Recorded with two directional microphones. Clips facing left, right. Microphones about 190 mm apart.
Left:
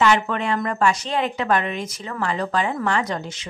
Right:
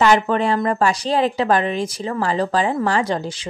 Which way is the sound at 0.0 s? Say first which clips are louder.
Right 4 dB; 35° right (ahead or behind).